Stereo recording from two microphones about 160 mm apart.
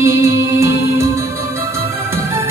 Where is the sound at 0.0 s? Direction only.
15° right (ahead or behind).